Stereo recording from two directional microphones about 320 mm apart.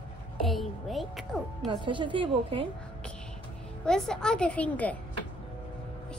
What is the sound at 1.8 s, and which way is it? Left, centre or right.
Speech, centre.